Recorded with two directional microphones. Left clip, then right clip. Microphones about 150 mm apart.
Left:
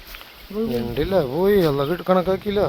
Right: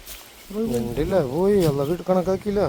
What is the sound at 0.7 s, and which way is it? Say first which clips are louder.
Speech: left 1 dB; centre (ahead or behind).